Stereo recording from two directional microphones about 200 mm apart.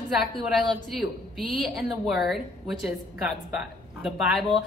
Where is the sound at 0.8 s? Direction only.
Centre (ahead or behind).